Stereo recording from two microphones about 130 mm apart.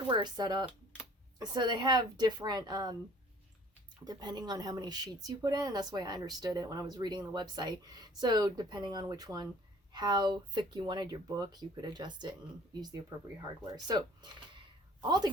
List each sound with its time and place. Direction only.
0.1 s speech: 35° right (ahead or behind)
4.0 s speech: 35° right (ahead or behind)